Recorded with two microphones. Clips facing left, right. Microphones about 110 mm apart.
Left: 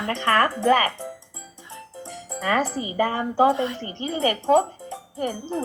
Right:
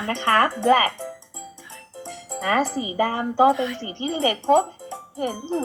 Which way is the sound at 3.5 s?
30° left (ahead or behind).